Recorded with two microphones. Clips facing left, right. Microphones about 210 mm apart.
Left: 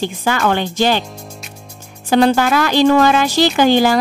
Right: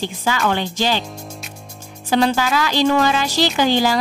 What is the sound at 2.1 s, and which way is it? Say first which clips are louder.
Speech: left 5 dB; 55° left (ahead or behind).